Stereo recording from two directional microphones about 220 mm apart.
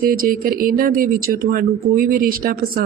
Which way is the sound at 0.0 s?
40° right (ahead or behind).